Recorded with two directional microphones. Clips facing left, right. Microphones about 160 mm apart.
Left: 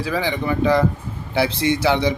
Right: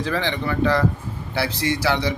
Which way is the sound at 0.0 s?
10° left (ahead or behind).